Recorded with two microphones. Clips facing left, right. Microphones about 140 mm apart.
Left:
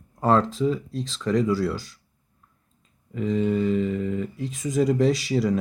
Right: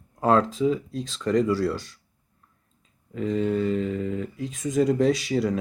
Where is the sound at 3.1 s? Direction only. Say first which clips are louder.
Left 1 dB; centre (ahead or behind).